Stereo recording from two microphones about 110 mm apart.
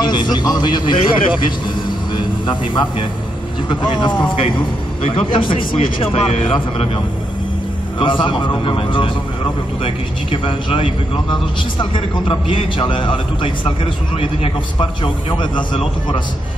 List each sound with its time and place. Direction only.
0.0 s a man's voice: 40° left (ahead or behind); by 6.3 s 60° left (ahead or behind)
6.4 s a man's voice: 50° left (ahead or behind)
8.0 s a man's voice: 50° left (ahead or behind)